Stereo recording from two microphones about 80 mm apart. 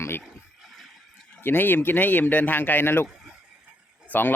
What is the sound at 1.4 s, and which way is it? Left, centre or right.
A man's voice, left.